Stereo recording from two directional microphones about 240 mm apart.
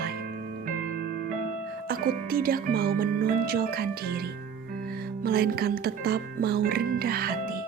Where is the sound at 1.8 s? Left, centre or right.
Right.